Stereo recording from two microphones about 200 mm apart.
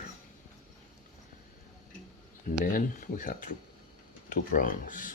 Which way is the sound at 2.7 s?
40° left (ahead or behind).